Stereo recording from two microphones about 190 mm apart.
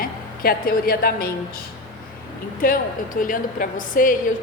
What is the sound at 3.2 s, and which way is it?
Speech, 45° left (ahead or behind).